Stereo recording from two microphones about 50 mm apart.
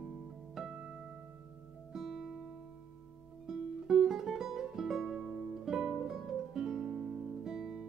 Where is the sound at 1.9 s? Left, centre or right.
Centre.